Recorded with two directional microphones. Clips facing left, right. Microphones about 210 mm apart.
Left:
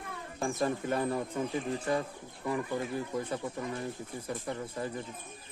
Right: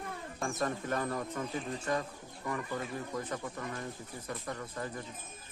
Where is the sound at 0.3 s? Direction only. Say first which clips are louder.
Left 4 dB; 30° left (ahead or behind).